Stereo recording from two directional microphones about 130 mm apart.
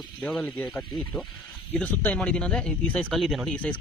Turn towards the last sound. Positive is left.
turn(degrees=10)  # may be behind; listen again after turning